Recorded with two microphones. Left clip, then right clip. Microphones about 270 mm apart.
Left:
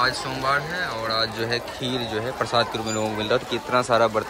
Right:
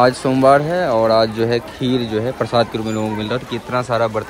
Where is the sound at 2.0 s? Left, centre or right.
Right.